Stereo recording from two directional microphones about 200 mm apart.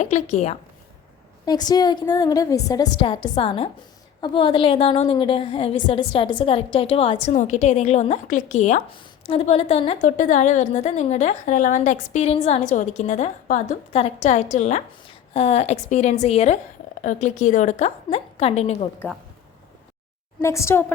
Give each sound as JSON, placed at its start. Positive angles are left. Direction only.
{"t": 0.0, "sound": "a woman's voice", "side_deg": 35}
{"t": 1.5, "sound": "a woman's voice", "side_deg": 20}
{"t": 20.4, "sound": "a woman's voice", "side_deg": 15}